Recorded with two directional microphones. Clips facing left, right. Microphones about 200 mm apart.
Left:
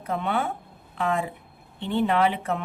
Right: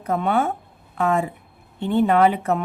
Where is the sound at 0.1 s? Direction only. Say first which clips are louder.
Right 6 dB; 45° right (ahead or behind).